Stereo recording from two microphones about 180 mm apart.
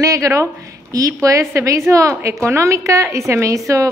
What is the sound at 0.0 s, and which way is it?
A woman's voice, 20° right (ahead or behind).